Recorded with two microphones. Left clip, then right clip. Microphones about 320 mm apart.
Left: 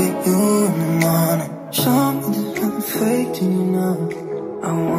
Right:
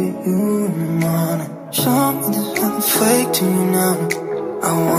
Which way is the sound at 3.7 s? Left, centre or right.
Right.